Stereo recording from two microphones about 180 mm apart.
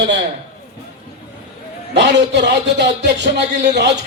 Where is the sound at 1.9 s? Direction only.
75° right (ahead or behind).